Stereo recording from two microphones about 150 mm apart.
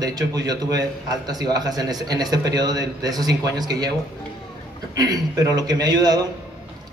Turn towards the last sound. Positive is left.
turn(degrees=-25)  # may be behind; listen again after turning